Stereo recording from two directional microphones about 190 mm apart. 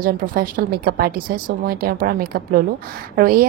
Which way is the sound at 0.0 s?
50° right (ahead or behind).